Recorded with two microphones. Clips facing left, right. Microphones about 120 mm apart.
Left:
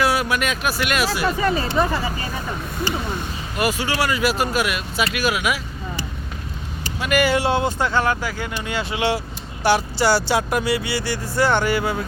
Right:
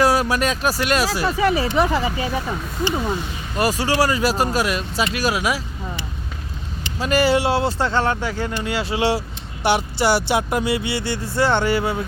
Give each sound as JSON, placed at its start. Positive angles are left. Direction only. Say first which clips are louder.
{"t": 0.0, "sound": "speech", "louder": "right 3 dB", "side_deg": -35}
{"t": 1.4, "sound": "speech", "louder": "right 4 dB", "side_deg": -5}
{"t": 3.6, "sound": "speech", "louder": "right 3 dB", "side_deg": -35}
{"t": 7.0, "sound": "speech", "louder": "right 1 dB", "side_deg": -30}